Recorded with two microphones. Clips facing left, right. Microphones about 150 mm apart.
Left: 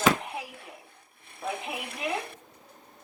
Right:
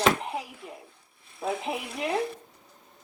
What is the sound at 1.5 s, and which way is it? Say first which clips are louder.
Speech: right 5 dB; 60° left (ahead or behind).